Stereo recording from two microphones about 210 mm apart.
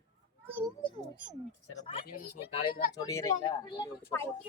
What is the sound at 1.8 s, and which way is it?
Speech, 25° left (ahead or behind).